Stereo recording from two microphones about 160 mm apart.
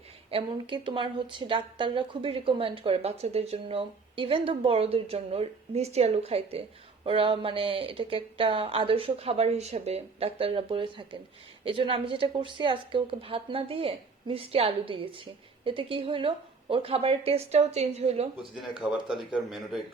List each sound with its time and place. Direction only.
0.3 s a woman's voice: 35° right (ahead or behind)
18.8 s speech: 5° right (ahead or behind)